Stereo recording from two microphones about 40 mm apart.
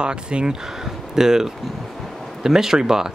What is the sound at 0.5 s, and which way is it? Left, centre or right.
Speech, centre.